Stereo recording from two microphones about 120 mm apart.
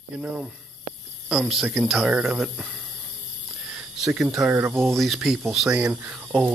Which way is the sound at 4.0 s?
5° right (ahead or behind).